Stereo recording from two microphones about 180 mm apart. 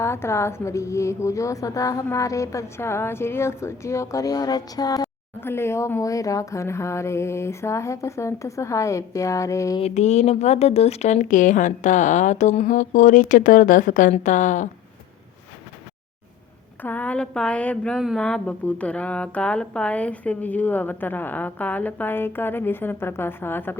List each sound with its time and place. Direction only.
0.0 s speech: 15° left (ahead or behind)
9.8 s speech: 40° left (ahead or behind)
16.8 s speech: 10° left (ahead or behind)